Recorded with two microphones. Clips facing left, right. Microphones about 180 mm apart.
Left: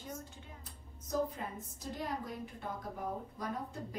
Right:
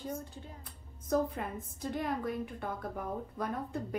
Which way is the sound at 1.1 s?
60° right (ahead or behind).